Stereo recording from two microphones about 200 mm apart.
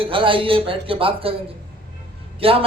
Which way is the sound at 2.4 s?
30° right (ahead or behind).